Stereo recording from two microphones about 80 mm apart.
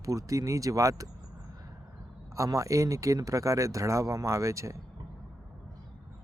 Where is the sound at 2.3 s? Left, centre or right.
Right.